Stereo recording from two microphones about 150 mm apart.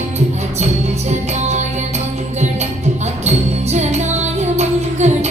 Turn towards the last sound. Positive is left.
turn(degrees=-50)  # may be behind; listen again after turning